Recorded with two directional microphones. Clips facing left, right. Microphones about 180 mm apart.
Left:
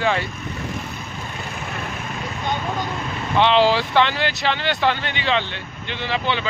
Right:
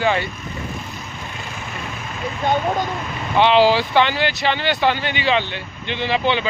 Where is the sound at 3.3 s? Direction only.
5° right (ahead or behind).